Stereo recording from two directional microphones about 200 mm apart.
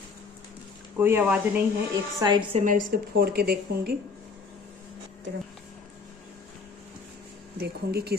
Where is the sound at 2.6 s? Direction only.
45° right (ahead or behind).